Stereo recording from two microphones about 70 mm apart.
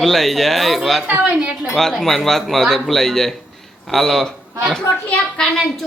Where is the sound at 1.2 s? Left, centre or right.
Centre.